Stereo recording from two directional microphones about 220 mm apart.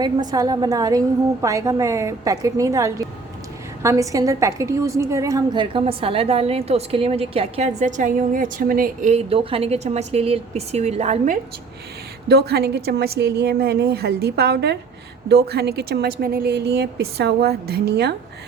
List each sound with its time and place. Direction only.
0.0 s a woman's voice: 20° right (ahead or behind)
12.3 s a woman's voice: 45° right (ahead or behind)